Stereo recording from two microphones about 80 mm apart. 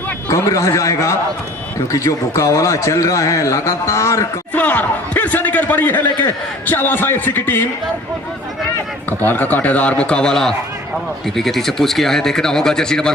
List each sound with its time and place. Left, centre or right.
0.3 s a man's voice: left
4.5 s speech: left
9.0 s speech: left